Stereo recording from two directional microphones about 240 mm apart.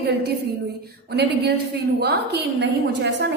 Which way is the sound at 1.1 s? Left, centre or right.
Right.